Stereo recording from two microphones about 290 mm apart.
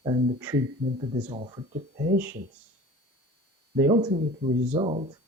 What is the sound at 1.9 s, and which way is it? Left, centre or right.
Speech, right.